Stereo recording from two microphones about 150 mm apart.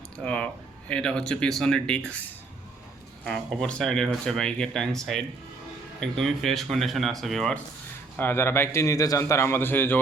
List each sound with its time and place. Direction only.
0.2 s speech: 5° left (ahead or behind)
3.2 s speech: centre (ahead or behind)
8.1 s a man's voice: 15° left (ahead or behind)